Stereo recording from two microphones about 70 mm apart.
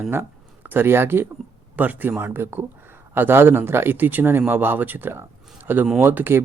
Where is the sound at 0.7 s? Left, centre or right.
Right.